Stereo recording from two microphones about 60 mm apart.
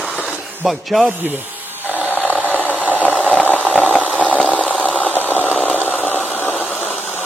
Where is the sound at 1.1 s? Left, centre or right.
Right.